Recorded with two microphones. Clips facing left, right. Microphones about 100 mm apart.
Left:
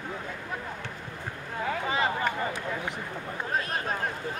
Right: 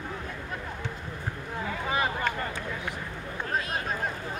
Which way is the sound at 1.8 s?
5° right (ahead or behind).